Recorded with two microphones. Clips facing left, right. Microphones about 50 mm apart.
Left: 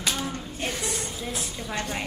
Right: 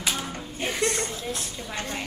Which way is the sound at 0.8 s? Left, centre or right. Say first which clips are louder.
Right 5 dB; centre.